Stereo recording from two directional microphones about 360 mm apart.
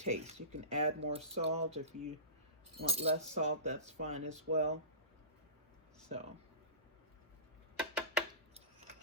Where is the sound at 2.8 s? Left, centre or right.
Centre.